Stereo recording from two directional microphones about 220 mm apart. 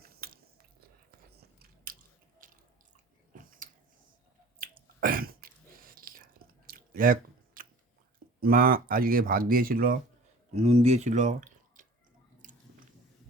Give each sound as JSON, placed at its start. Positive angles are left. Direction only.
{"t": 0.0, "sound": "biting", "side_deg": -40}
{"t": 1.4, "sound": "biting", "side_deg": -40}
{"t": 2.4, "sound": "water", "side_deg": -40}
{"t": 3.3, "sound": "a sound", "side_deg": -40}
{"t": 4.5, "sound": "finger snapping", "side_deg": -40}
{"t": 8.4, "sound": "speech", "side_deg": -40}
{"t": 10.5, "sound": "speech", "side_deg": -30}